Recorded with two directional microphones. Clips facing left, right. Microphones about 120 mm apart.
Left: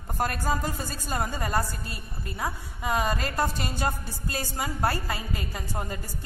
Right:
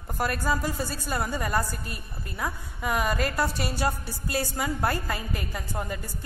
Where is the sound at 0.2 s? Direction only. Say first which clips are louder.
Right 1 dB; 40° left (ahead or behind).